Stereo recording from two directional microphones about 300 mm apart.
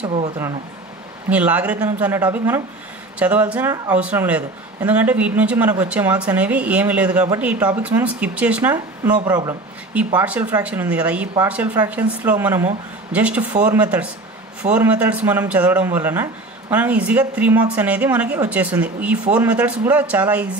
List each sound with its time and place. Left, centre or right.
0.0 s speech: centre
1.3 s speech: centre